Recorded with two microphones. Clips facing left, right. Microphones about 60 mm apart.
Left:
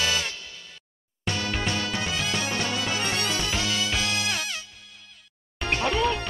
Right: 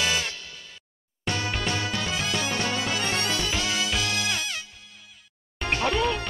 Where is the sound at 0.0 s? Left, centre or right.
Right.